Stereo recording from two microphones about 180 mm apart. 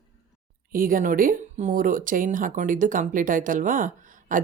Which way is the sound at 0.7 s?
50° right (ahead or behind).